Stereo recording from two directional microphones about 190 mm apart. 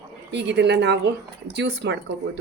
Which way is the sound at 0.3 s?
65° right (ahead or behind).